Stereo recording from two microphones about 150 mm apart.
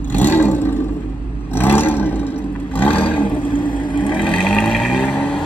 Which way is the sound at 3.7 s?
30° left (ahead or behind).